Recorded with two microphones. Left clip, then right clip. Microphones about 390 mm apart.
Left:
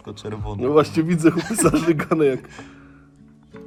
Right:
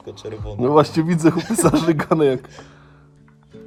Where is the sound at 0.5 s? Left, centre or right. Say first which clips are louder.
Right 2 dB; right.